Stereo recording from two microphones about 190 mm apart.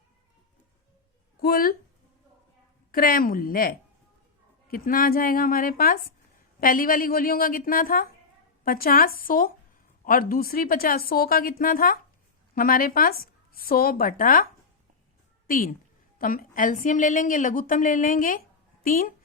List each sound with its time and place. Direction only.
1.4 s speech: 50° left (ahead or behind)
2.9 s a woman's voice: 50° left (ahead or behind)
15.4 s a woman's voice: 45° left (ahead or behind)